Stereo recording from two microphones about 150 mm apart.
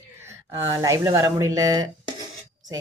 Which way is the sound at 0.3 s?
20° right (ahead or behind).